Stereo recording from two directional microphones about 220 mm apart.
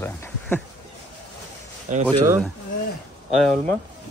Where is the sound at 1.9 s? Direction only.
35° right (ahead or behind).